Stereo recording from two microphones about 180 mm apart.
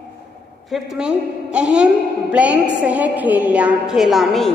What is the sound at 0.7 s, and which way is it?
A woman's voice, centre (ahead or behind).